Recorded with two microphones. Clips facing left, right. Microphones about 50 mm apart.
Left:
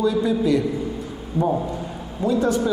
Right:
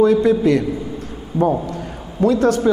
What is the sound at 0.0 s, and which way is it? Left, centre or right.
Speech, right.